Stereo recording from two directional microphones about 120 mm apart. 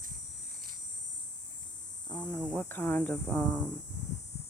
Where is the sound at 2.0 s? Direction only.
30° left (ahead or behind).